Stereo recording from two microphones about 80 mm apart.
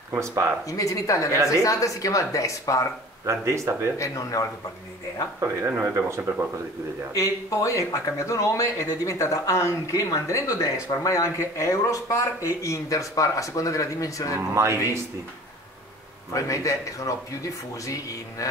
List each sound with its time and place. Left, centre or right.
0.1 s speech: right
0.7 s a woman's voice: left
3.3 s speech: right
4.0 s a woman's voice: left
5.9 s speech: right
7.2 s a woman's voice: left
14.5 s speech: right
16.3 s a woman's voice: left